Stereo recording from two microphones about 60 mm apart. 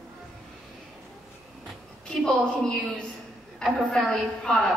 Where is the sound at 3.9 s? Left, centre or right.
Centre.